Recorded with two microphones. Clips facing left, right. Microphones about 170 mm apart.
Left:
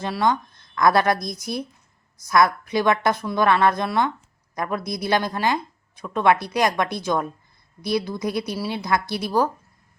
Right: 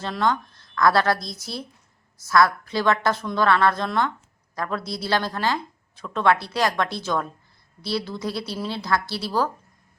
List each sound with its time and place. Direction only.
0.0 s a woman's voice: 15° left (ahead or behind)